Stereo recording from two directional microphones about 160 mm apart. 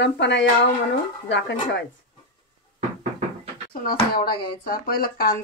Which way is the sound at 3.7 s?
65° left (ahead or behind).